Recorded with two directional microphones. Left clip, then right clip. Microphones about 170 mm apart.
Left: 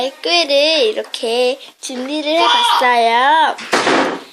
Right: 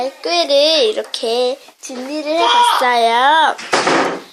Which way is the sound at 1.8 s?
20° left (ahead or behind).